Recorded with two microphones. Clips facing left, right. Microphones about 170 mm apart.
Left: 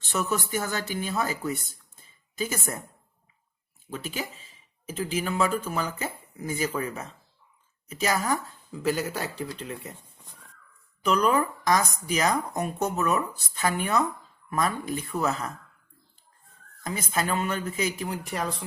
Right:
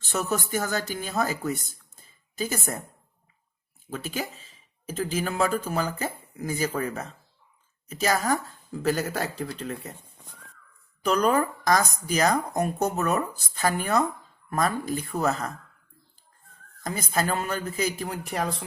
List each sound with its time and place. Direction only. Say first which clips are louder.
0.1 s speech: right 1 dB; 40° right (ahead or behind)
3.8 s speech: right 2 dB; 45° right (ahead or behind)
11.0 s speech: right 1 dB; 40° right (ahead or behind)
16.8 s speech: right 2 dB; 40° right (ahead or behind)